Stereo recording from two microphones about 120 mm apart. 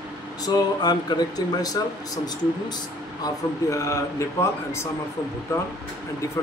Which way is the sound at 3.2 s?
25° left (ahead or behind).